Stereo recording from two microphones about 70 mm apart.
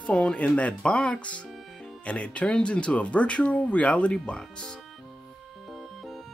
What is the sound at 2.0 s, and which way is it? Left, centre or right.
Speech, centre.